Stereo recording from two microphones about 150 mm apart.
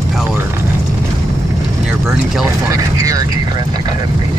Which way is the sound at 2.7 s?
20° right (ahead or behind).